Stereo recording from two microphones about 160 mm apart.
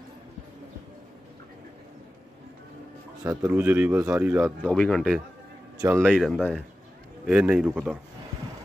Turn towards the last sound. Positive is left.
turn(degrees=-5)  # may be behind; listen again after turning